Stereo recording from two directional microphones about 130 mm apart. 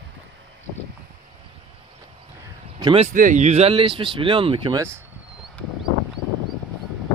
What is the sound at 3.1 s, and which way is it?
Speech, 80° right.